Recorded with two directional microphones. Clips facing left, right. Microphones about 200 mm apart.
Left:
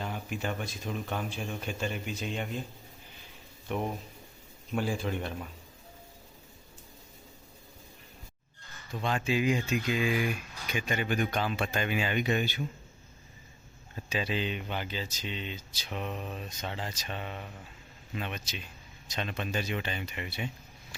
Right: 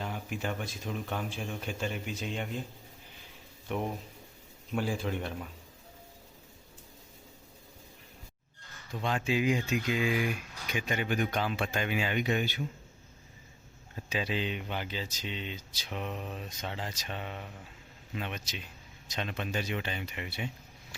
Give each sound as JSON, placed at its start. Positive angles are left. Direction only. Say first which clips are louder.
{"t": 0.0, "sound": "speech", "louder": "left 1 dB", "side_deg": 0}
{"t": 3.7, "sound": "speech", "louder": "left 1 dB", "side_deg": -5}
{"t": 8.9, "sound": "speech", "louder": "left 1 dB", "side_deg": -15}
{"t": 14.1, "sound": "speech", "louder": "left 1 dB", "side_deg": -15}